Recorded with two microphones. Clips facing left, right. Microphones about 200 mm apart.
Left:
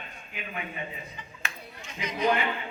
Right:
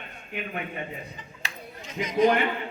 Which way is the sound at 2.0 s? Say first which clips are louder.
Right 9 dB; 45° right (ahead or behind).